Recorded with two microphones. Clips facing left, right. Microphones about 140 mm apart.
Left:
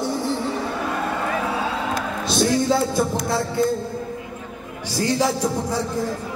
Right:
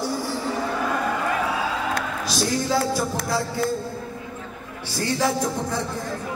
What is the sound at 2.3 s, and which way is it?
Music, 25° left (ahead or behind).